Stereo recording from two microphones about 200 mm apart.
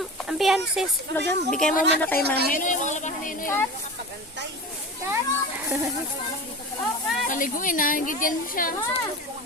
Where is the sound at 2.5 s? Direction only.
40° left (ahead or behind).